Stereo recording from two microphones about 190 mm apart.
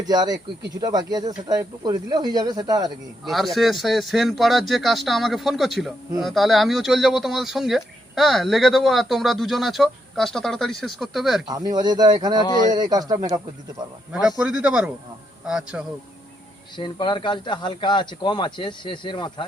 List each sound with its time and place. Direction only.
0.0 s speech: 20° right (ahead or behind)
3.2 s speech: centre (ahead or behind)
11.4 s speech: 20° right (ahead or behind)
12.5 s speech: 20° left (ahead or behind)
12.7 s speech: 20° right (ahead or behind)
14.1 s speech: 5° right (ahead or behind)
16.7 s speech: 25° left (ahead or behind)